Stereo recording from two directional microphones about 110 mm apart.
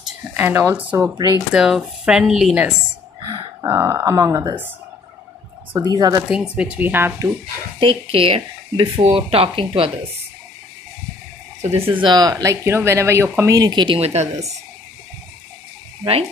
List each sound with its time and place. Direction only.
0.4 s speech: 20° right (ahead or behind)
1.5 s speech: 5° right (ahead or behind)
3.2 s a sound: 35° right (ahead or behind)
3.6 s speech: 25° right (ahead or behind)
5.8 s speech: 35° right (ahead or behind)
6.2 s speech: 10° right (ahead or behind)
7.8 s speech: 55° right (ahead or behind)
11.6 s speech: 70° right (ahead or behind)
11.9 s speech: 45° right (ahead or behind)
12.6 s speech: 25° right (ahead or behind)
13.6 s speech: 40° right (ahead or behind)
13.9 s speech: 75° right (ahead or behind)